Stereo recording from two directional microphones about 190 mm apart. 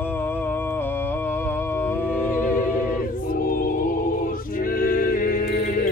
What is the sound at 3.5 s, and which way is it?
Music, 50° left (ahead or behind).